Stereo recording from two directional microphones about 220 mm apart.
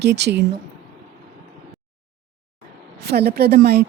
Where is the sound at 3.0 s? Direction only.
45° right (ahead or behind).